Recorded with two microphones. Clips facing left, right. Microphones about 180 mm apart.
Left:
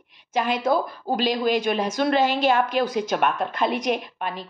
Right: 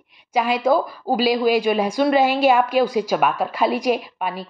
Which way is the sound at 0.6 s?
5° right (ahead or behind).